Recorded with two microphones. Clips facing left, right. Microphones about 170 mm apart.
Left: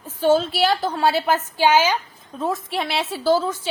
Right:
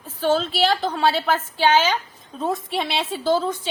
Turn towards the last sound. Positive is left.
turn(degrees=5)  # may be behind; listen again after turning